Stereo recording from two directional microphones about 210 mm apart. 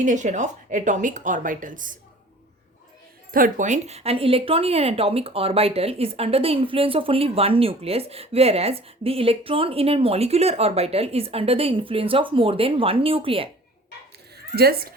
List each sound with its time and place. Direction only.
0.0 s a woman's voice: 35° right (ahead or behind)
3.3 s speech: 40° right (ahead or behind)
14.3 s speech: 50° right (ahead or behind)